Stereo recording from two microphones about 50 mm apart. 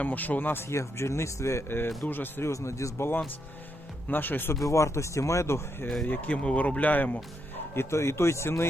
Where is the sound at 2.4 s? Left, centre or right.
Left.